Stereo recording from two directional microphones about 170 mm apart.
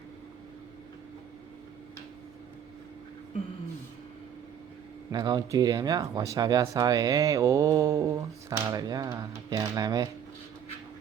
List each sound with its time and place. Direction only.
5.1 s speech: 25° right (ahead or behind)